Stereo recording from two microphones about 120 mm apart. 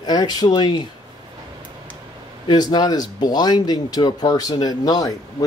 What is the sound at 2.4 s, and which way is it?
Speech, 35° left (ahead or behind).